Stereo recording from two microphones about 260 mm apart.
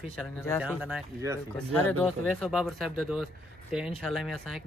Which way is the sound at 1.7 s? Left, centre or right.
Centre.